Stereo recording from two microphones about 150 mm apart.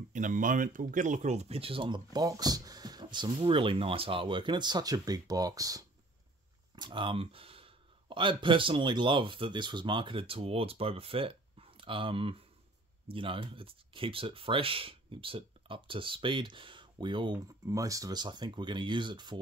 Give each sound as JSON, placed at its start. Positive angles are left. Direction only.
{"t": 0.1, "sound": "speech", "side_deg": -60}
{"t": 17.6, "sound": "speech", "side_deg": -20}